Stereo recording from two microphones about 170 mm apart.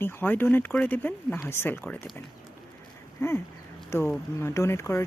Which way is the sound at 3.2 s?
15° left (ahead or behind).